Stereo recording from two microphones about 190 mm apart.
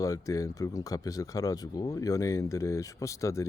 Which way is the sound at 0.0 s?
15° left (ahead or behind).